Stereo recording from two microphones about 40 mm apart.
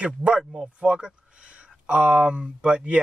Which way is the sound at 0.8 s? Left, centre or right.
Right.